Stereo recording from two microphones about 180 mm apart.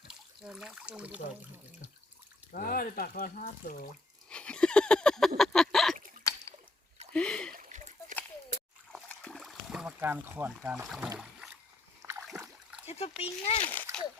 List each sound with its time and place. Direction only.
0.4 s speech: 5° right (ahead or behind)
2.5 s speech: 55° left (ahead or behind)
4.3 s a sound: 5° left (ahead or behind)
6.3 s a sound: 15° left (ahead or behind)
7.1 s splash: 5° left (ahead or behind)
7.5 s a sound: 45° right (ahead or behind)
8.9 s boat: 5° left (ahead or behind); by 10.7 s 15° right (ahead or behind)
10.8 s speech: centre (ahead or behind)
12.2 s splash: 5° right (ahead or behind)
13.2 s speech: 35° left (ahead or behind)
13.7 s splash: 10° left (ahead or behind)